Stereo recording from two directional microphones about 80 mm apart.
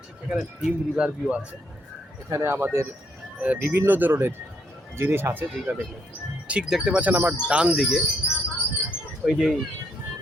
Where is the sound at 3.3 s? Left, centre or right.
Centre.